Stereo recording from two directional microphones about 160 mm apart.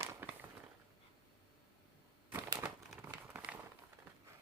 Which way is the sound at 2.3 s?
15° right (ahead or behind).